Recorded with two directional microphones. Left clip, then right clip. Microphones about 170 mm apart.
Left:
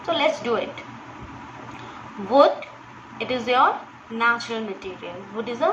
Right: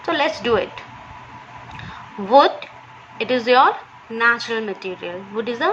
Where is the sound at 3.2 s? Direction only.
40° right (ahead or behind).